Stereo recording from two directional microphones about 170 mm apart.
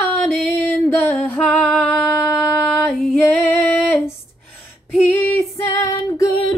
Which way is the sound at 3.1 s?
10° left (ahead or behind).